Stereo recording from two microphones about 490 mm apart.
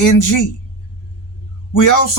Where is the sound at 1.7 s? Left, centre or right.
Left.